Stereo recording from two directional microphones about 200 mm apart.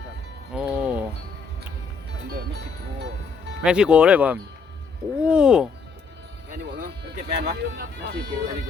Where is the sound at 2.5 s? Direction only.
60° right (ahead or behind).